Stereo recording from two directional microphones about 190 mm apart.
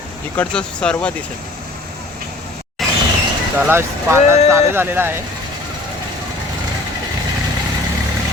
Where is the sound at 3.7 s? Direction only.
15° right (ahead or behind).